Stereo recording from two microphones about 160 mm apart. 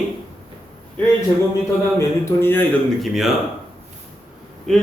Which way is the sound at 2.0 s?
15° left (ahead or behind).